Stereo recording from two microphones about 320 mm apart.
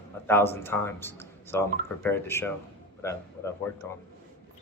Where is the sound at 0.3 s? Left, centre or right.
Centre.